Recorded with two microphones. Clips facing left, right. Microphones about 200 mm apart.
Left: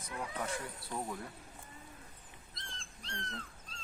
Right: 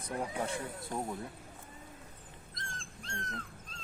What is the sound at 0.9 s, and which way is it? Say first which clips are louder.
Speech: right 3 dB; 45° right (ahead or behind).